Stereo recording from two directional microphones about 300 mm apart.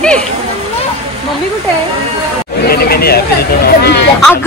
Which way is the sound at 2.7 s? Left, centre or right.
Left.